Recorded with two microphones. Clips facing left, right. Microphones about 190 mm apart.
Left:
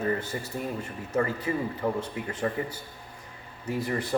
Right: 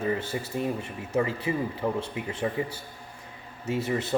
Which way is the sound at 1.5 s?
15° right (ahead or behind).